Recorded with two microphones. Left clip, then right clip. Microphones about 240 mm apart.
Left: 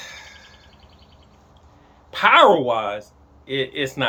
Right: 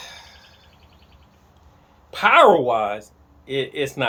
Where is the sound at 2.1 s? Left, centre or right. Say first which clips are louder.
Left 1 dB; centre.